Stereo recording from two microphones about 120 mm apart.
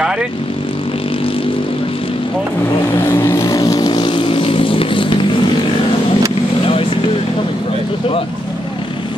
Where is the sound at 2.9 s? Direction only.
20° left (ahead or behind); by 5.1 s 45° left (ahead or behind).